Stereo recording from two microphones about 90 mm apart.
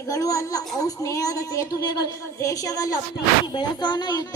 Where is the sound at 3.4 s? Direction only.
60° left (ahead or behind).